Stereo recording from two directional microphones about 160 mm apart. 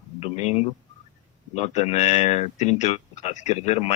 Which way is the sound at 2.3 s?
45° left (ahead or behind).